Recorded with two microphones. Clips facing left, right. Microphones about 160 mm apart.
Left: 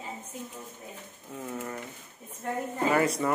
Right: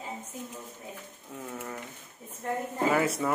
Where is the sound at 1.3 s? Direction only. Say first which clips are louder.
Left 2 dB; 5° left (ahead or behind).